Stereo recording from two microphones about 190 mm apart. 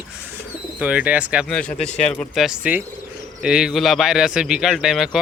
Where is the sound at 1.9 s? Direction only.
35° left (ahead or behind).